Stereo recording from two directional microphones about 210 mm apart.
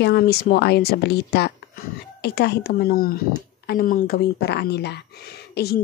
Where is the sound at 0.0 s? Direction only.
50° left (ahead or behind).